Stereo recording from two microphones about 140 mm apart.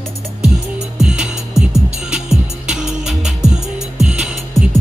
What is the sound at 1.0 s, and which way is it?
Music, 5° right (ahead or behind).